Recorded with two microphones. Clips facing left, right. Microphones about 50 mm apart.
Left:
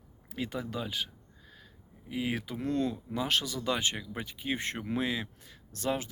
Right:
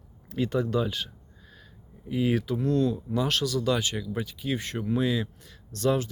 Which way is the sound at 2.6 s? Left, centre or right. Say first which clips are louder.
Right 6 dB; left.